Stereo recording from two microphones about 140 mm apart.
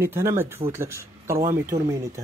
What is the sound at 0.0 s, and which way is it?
Speech, 15° right (ahead or behind).